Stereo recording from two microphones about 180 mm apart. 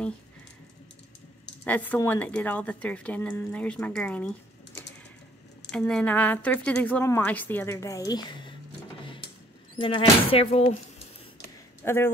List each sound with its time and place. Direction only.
1.6 s a woman's voice: 10° left (ahead or behind)
5.7 s a woman's voice: 5° left (ahead or behind); by 8.5 s 25° left (ahead or behind)
9.8 s speech: 30° left (ahead or behind)
11.8 s speech: 15° left (ahead or behind)